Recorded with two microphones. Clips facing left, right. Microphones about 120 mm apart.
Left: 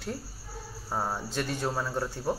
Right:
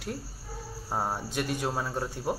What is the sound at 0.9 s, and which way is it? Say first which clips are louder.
Speech: even; 15° right (ahead or behind).